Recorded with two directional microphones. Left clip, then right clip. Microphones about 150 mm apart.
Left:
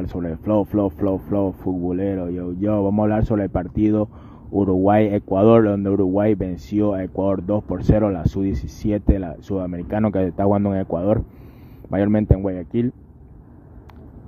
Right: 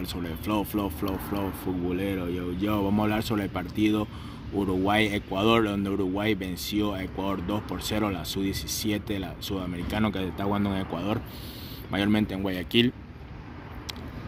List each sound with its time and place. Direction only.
0.2 s speech: 40° left (ahead or behind)
4.6 s speech: 15° left (ahead or behind)
4.8 s speech: 50° left (ahead or behind)
8.2 s speech: 65° left (ahead or behind)
10.9 s speech: 40° left (ahead or behind)
11.9 s speech: 50° left (ahead or behind)
12.4 s speech: 25° left (ahead or behind)